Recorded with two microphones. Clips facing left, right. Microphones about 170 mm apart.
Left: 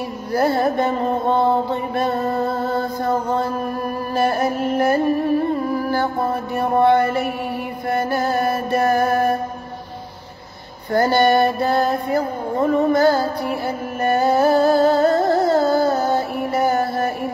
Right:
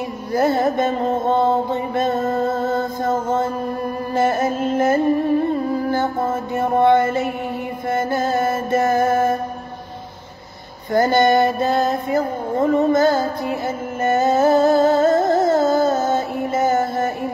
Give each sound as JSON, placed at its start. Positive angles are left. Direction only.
{"t": 0.3, "sound": "mantra", "side_deg": -20}
{"t": 4.1, "sound": "music", "side_deg": -20}
{"t": 6.5, "sound": "mantra", "side_deg": -20}
{"t": 7.9, "sound": "music", "side_deg": -20}
{"t": 10.9, "sound": "music", "side_deg": -20}